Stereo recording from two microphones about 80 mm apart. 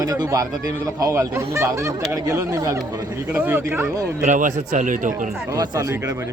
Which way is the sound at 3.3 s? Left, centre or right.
Right.